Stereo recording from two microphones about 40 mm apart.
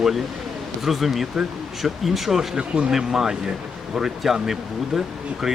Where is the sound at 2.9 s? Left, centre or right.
Centre.